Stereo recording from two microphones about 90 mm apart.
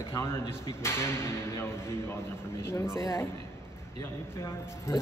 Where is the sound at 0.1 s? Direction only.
30° left (ahead or behind).